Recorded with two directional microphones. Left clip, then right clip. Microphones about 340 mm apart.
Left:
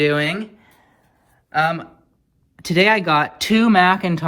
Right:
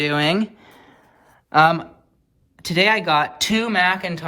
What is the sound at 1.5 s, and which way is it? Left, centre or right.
Speech, centre.